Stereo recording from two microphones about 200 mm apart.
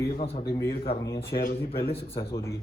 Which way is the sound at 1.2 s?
45° left (ahead or behind).